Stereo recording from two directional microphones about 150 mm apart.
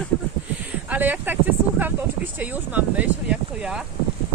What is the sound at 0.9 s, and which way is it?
Speech, 10° right (ahead or behind).